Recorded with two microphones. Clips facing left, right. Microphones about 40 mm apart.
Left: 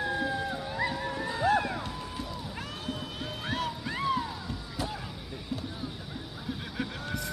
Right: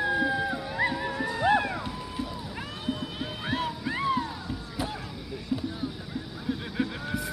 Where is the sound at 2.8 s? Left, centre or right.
Centre.